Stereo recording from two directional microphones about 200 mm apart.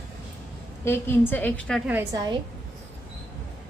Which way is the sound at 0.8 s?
10° left (ahead or behind).